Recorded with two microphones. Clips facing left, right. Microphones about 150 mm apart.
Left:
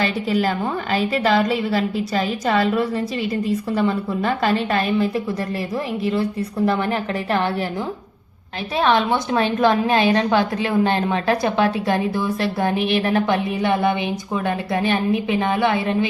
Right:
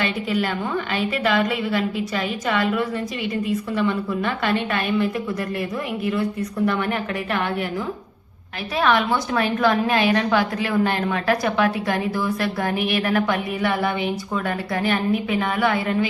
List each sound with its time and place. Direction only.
0.0 s a woman's voice: 35° left (ahead or behind)
6.7 s a woman's voice: 30° left (ahead or behind)
8.8 s a woman's voice: 25° left (ahead or behind)